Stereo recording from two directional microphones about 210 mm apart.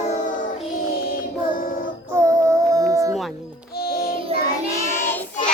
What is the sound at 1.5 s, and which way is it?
Child singing, 40° left (ahead or behind).